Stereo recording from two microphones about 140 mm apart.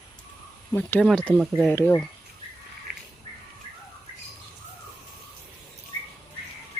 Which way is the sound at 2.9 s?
90° right.